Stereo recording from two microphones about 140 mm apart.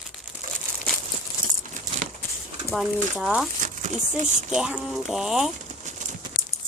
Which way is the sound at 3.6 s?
60° right (ahead or behind).